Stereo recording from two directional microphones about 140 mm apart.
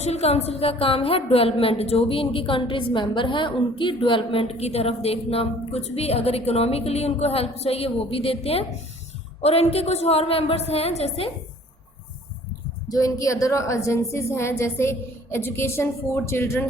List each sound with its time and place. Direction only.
0.0 s a woman's voice: 50° left (ahead or behind)
12.9 s a woman's voice: 25° left (ahead or behind)